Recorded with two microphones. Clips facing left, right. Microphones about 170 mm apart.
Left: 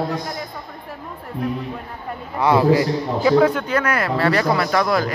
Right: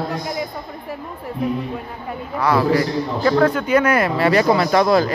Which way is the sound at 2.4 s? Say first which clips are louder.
Left 2 dB; 20° left (ahead or behind).